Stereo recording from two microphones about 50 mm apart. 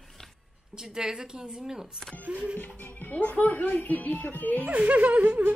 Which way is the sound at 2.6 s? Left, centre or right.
Left.